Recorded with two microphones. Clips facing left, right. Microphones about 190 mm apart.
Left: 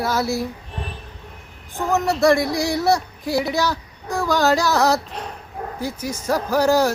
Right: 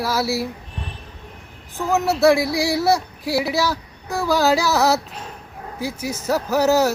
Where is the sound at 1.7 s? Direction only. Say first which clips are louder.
Even; centre (ahead or behind).